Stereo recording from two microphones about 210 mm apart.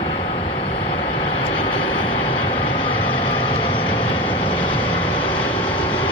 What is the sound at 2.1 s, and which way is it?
Vehicle, 25° left (ahead or behind).